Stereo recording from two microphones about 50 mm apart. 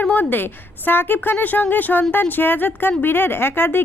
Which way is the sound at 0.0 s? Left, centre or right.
Left.